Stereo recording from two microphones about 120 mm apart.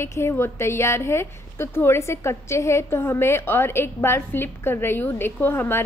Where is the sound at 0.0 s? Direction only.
20° left (ahead or behind).